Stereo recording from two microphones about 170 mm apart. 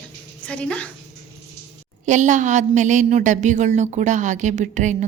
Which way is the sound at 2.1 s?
45° right (ahead or behind).